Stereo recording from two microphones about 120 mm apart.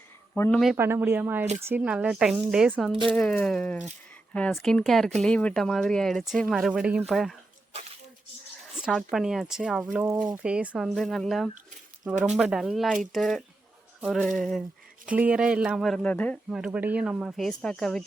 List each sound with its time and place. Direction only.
0.5 s speech: centre (ahead or behind)
0.8 s speech: 20° right (ahead or behind)
3.1 s speech: 10° left (ahead or behind)
8.8 s speech: 5° right (ahead or behind)
10.8 s speech: 5° left (ahead or behind)
15.0 s speech: 10° right (ahead or behind)
16.0 s speech: 10° left (ahead or behind)
16.5 s speech: 5° right (ahead or behind)